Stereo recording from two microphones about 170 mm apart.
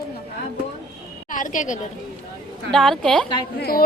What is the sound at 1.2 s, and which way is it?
Speech, 50° left (ahead or behind).